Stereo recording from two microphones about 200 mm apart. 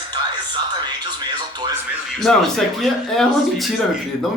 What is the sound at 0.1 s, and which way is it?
Speech, 25° right (ahead or behind).